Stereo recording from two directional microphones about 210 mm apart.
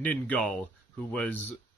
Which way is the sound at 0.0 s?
5° left (ahead or behind).